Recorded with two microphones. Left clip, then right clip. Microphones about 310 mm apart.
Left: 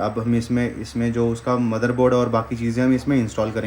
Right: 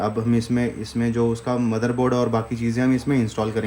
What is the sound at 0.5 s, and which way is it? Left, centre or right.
Speech, right.